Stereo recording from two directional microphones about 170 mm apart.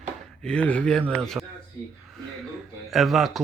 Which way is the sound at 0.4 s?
5° left (ahead or behind).